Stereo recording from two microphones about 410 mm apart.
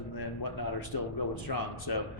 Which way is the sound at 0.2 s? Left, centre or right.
Left.